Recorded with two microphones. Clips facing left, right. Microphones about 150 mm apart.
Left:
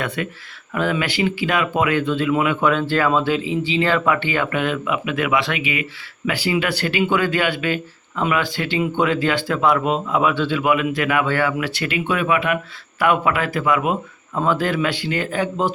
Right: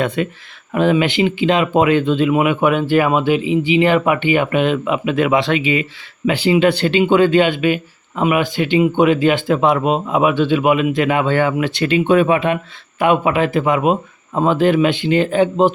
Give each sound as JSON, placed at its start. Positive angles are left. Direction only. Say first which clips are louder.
{"t": 0.2, "sound": "speech", "louder": "right 6 dB", "side_deg": -25}